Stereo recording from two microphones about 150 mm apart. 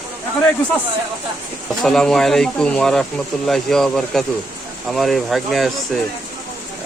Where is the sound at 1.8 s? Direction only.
5° left (ahead or behind).